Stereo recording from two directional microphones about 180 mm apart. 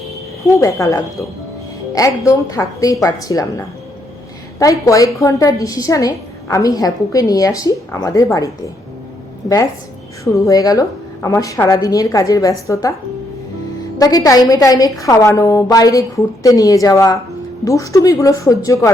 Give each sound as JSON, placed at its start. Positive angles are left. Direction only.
{"t": 0.6, "sound": "a woman's voice", "side_deg": 15}
{"t": 4.6, "sound": "a woman's voice", "side_deg": 20}
{"t": 10.2, "sound": "a woman's voice", "side_deg": 20}
{"t": 14.0, "sound": "a woman's voice", "side_deg": 20}